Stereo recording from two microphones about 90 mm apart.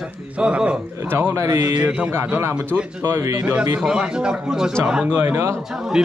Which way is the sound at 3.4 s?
15° right (ahead or behind).